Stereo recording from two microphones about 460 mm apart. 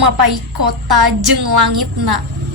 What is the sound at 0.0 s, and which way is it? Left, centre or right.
A woman's voice, right.